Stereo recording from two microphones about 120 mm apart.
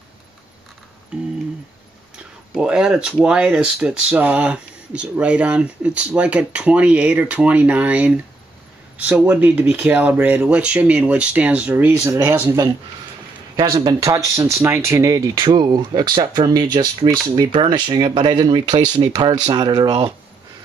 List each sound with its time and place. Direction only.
1.1 s speech: 10° right (ahead or behind)
13.6 s speech: 40° right (ahead or behind)